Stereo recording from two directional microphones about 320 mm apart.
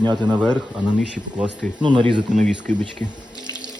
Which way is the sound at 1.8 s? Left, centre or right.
Centre.